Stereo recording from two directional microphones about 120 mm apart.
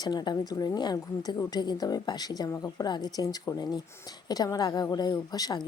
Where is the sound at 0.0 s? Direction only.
35° left (ahead or behind).